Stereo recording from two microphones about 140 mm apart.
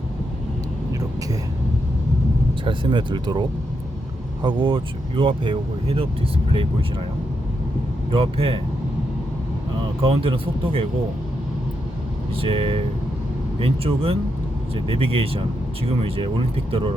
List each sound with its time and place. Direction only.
2.6 s speech: 35° right (ahead or behind)
4.4 s speech: 35° right (ahead or behind)
8.1 s speech: 40° right (ahead or behind)
10.0 s speech: 40° right (ahead or behind)
12.4 s speech: 40° right (ahead or behind)